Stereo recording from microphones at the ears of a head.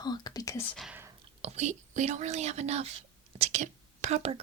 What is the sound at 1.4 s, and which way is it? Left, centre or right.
Speech, right.